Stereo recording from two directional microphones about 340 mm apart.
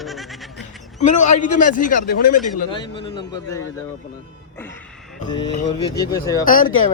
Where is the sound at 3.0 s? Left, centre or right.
Centre.